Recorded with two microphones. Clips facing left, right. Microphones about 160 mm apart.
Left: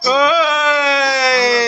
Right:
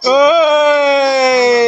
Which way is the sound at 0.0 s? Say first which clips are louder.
Right 6 dB; 20° right (ahead or behind).